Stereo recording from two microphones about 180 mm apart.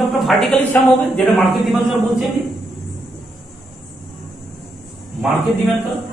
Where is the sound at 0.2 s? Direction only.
Centre (ahead or behind).